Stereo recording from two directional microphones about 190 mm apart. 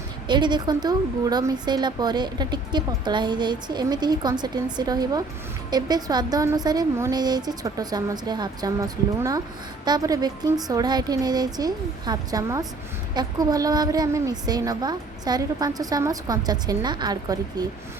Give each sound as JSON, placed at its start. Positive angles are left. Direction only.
{"t": 0.3, "sound": "a woman's voice", "side_deg": -25}